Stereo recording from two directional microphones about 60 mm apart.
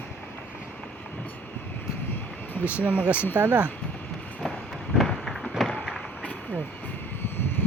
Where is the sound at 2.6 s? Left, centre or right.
Right.